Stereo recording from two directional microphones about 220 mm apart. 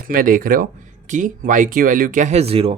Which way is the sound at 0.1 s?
40° right (ahead or behind).